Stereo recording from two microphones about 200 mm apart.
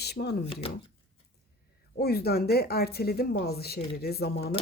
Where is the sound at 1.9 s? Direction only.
50° left (ahead or behind).